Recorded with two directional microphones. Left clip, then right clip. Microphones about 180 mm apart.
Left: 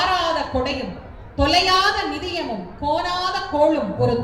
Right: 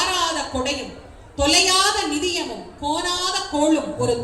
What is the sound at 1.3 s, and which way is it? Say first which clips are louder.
A woman's voice: even; 25° right (ahead or behind).